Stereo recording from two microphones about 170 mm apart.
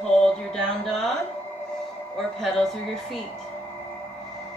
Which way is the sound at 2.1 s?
Centre (ahead or behind).